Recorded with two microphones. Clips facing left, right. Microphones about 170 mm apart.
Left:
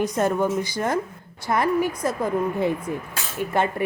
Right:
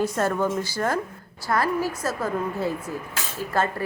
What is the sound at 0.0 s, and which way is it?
A woman's voice, 20° left (ahead or behind).